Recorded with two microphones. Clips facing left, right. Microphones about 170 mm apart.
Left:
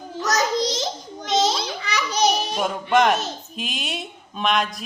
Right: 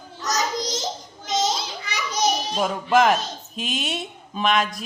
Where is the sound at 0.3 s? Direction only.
65° left (ahead or behind).